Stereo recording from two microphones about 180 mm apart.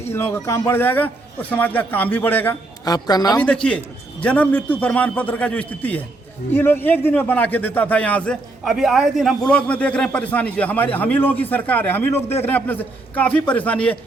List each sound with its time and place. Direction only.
0.0 s a man's voice: 15° left (ahead or behind)
2.8 s a woman's voice: 20° left (ahead or behind)
3.3 s a man's voice: 5° left (ahead or behind)